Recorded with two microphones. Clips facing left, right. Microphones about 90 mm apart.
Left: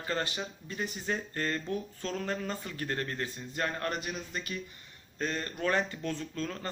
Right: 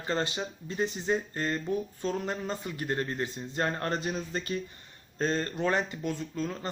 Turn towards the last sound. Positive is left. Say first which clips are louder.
# right 3 dB
turn(degrees=-15)  # may be behind; listen again after turning